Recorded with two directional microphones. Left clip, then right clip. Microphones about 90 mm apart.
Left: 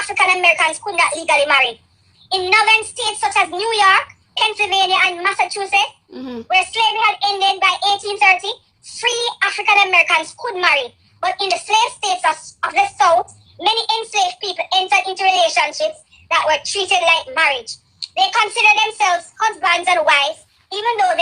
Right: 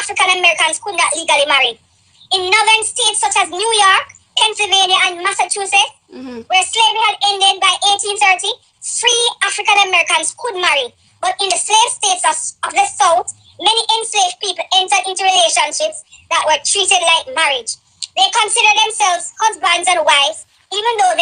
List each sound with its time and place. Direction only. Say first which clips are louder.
0.0 s a woman's voice: right 1 dB; 35° right (ahead or behind)
6.1 s speech: left 3 dB; 20° right (ahead or behind)
6.5 s a child's voice: right 3 dB; 35° right (ahead or behind)